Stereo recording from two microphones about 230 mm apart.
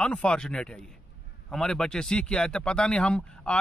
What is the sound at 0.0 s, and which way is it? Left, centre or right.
Speech, centre.